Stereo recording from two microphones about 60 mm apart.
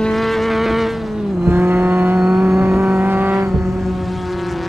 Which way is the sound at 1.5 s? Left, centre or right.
Right.